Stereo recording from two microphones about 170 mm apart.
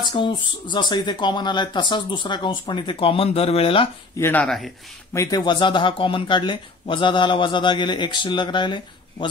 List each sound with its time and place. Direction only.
0.0 s speech: 25° left (ahead or behind)
4.2 s speech: 10° left (ahead or behind)
5.1 s speech: 20° left (ahead or behind)